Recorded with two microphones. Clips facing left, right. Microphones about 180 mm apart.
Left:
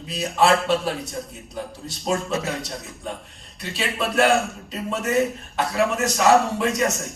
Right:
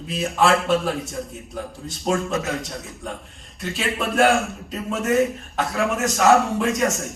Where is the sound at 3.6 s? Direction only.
45° right (ahead or behind).